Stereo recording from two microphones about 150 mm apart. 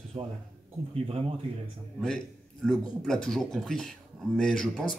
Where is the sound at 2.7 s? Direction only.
5° left (ahead or behind).